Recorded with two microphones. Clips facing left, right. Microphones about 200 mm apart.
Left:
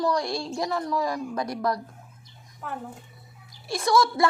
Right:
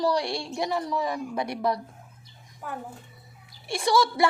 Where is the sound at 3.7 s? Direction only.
30° right (ahead or behind).